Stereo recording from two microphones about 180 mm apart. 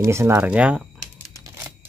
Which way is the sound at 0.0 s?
15° right (ahead or behind).